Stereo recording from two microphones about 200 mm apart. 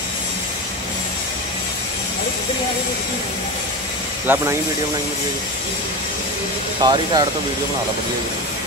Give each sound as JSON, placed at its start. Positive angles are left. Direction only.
{"t": 4.3, "sound": "speech", "side_deg": -10}
{"t": 6.8, "sound": "speech", "side_deg": -20}